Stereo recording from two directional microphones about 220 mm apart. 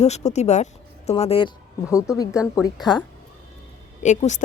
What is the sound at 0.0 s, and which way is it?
A woman's voice, 30° left (ahead or behind).